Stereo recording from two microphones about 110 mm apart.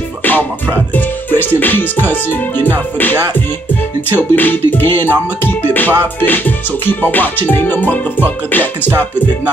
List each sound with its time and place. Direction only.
0.2 s music: 15° left (ahead or behind)
1.5 s music: 15° left (ahead or behind)
4.2 s music: 15° left (ahead or behind)